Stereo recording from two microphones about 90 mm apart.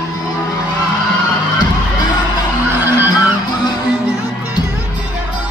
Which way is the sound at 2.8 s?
25° right (ahead or behind).